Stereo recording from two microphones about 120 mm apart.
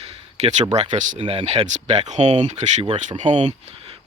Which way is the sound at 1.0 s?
90° right.